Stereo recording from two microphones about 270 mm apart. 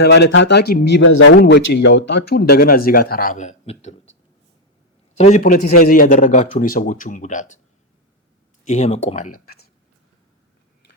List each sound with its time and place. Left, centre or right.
0.0 s a man's voice: left
5.1 s a man's voice: left
8.6 s a man's voice: left